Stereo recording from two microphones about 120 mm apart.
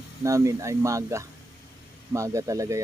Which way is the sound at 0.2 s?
25° right (ahead or behind).